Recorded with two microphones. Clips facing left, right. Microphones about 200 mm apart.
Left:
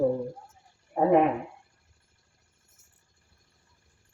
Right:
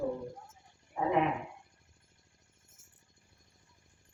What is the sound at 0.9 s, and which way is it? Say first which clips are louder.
Speech: left 10 dB; 50° left (ahead or behind).